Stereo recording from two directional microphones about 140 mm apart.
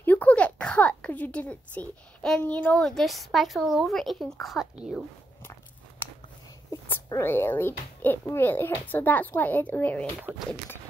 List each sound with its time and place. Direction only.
0.0 s a woman's voice: 10° left (ahead or behind)
6.7 s a child's voice: 20° left (ahead or behind)
10.3 s speech: 10° right (ahead or behind)